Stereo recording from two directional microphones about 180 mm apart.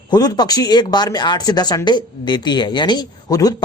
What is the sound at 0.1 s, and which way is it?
A man's voice, 20° left (ahead or behind).